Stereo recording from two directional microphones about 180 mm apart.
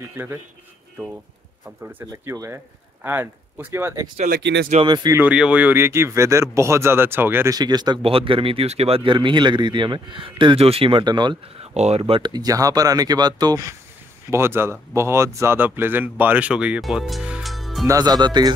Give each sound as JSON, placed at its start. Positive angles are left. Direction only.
{"t": 0.1, "sound": "speech", "side_deg": -10}
{"t": 1.9, "sound": "speech", "side_deg": -10}
{"t": 4.3, "sound": "speech", "side_deg": -75}
{"t": 4.8, "sound": "speech", "side_deg": -25}
{"t": 5.2, "sound": "speech", "side_deg": -5}
{"t": 11.7, "sound": "speech", "side_deg": -35}
{"t": 17.8, "sound": "speech", "side_deg": -20}